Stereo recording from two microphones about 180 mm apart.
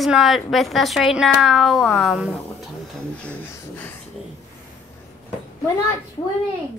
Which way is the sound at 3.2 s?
10° left (ahead or behind).